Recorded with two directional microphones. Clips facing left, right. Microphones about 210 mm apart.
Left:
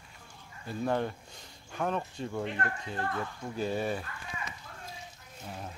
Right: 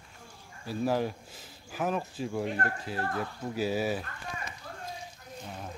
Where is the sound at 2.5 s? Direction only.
40° right (ahead or behind).